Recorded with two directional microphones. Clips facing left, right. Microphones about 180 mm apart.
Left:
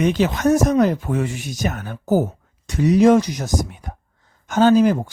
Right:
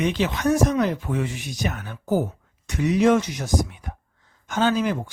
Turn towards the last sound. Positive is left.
turn(degrees=40)  # may be behind; listen again after turning